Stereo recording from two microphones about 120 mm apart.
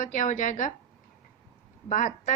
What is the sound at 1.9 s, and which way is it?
Speech, 90° left.